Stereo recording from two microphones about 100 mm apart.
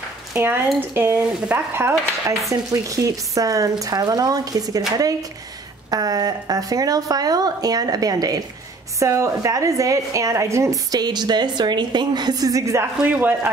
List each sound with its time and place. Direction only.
0.3 s a woman's voice: 20° right (ahead or behind); by 4.8 s 40° right (ahead or behind)
5.9 s a woman's voice: 40° right (ahead or behind)
13.0 s speech: 15° right (ahead or behind)